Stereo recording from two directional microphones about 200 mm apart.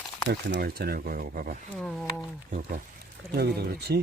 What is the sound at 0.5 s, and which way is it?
Speech, 50° right (ahead or behind).